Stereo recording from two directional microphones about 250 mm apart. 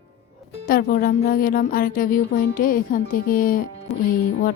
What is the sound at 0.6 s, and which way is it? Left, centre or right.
Speech, left.